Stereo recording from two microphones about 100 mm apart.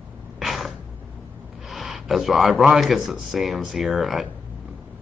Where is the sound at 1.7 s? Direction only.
Centre (ahead or behind).